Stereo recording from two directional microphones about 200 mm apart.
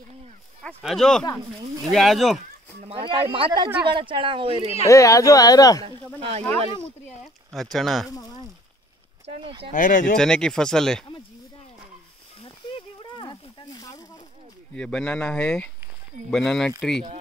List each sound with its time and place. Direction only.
0.7 s speech: centre (ahead or behind)
2.8 s speech: 25° right (ahead or behind)
4.8 s speech: 15° left (ahead or behind)
5.9 s speech: 25° right (ahead or behind)
6.8 s speech: centre (ahead or behind)
9.2 s speech: 30° right (ahead or behind)
9.7 s speech: 40° left (ahead or behind)
10.1 s speech: 5° left (ahead or behind)
12.4 s snake: 25° left (ahead or behind)
14.7 s speech: 5° left (ahead or behind)